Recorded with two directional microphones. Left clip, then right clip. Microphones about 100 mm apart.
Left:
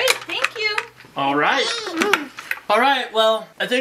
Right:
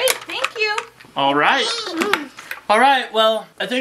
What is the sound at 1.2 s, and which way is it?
Speech, 25° right (ahead or behind).